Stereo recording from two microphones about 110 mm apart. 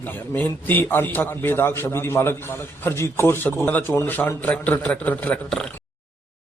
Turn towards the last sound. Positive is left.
turn(degrees=15)  # may be behind; listen again after turning